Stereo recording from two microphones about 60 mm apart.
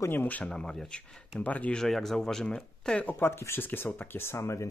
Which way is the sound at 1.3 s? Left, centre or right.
Left.